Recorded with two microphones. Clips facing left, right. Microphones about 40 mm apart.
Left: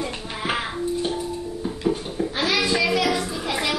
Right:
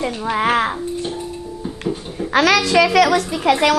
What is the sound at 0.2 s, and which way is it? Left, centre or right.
Babbling, right.